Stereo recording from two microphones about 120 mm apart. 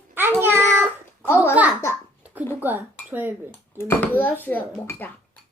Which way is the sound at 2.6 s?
15° right (ahead or behind).